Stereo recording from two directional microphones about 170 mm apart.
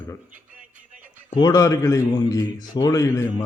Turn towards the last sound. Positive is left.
turn(degrees=20)  # may be behind; listen again after turning